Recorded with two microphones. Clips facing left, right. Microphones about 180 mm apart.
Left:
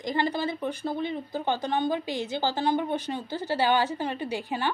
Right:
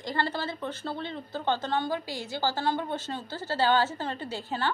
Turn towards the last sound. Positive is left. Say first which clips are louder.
# left 2 dB
turn(degrees=15)  # may be behind; listen again after turning